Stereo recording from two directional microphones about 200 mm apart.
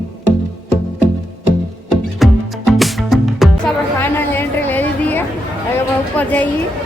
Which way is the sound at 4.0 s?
10° left (ahead or behind).